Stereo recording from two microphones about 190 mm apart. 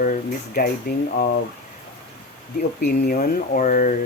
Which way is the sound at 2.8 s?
50° left (ahead or behind).